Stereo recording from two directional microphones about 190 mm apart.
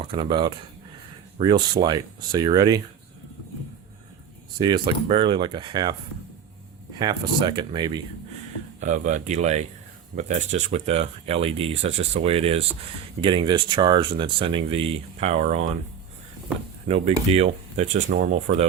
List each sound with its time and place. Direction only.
0.0 s speech: 25° right (ahead or behind)
4.5 s speech: 25° right (ahead or behind)
7.0 s speech: 20° right (ahead or behind)
8.8 s speech: 40° right (ahead or behind)
16.9 s speech: 35° right (ahead or behind)